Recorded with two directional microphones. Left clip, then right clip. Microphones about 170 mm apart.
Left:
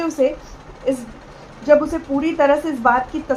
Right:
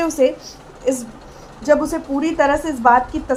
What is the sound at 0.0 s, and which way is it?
A woman's voice, 45° right (ahead or behind).